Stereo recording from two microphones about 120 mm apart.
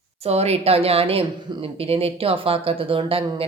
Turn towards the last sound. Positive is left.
turn(degrees=-50)  # may be behind; listen again after turning